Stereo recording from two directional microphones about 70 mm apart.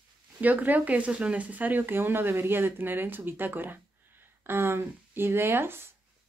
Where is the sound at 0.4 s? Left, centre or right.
Right.